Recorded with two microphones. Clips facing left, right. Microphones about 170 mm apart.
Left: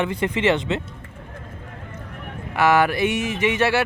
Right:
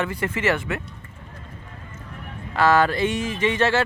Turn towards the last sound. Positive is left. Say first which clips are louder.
# left 1 dB
turn(degrees=10)  # may be behind; listen again after turning